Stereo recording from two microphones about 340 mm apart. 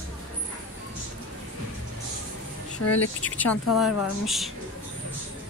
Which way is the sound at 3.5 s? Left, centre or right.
Left.